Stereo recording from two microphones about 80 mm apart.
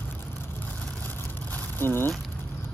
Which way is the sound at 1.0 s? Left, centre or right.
Left.